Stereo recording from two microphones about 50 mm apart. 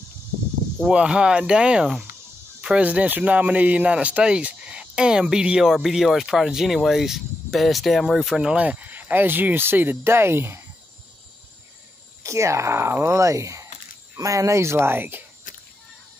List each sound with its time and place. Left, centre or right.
0.9 s speech: centre
2.6 s speech: right
5.7 s speech: centre
8.5 s speech: right
12.2 s speech: right